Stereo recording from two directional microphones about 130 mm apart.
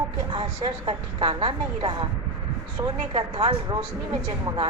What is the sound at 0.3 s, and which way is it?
A woman's voice, 40° right (ahead or behind).